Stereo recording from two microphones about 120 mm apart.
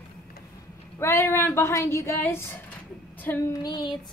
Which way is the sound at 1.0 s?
20° left (ahead or behind).